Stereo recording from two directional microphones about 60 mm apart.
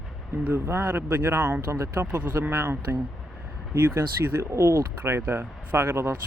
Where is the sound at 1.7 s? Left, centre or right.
Right.